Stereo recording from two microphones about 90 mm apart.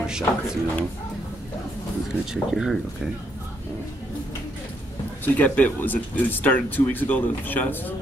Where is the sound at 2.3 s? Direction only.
Centre (ahead or behind).